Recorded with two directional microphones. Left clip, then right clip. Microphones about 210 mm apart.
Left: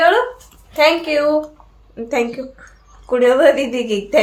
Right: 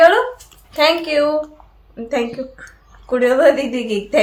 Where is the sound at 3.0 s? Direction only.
15° left (ahead or behind).